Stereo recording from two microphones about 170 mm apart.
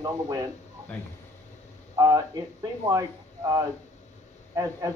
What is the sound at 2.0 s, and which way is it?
Speech, 20° right (ahead or behind).